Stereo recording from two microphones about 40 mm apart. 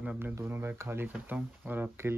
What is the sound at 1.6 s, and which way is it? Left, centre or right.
Speech, right.